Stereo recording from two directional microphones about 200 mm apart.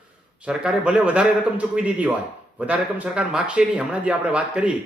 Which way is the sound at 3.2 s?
5° right (ahead or behind).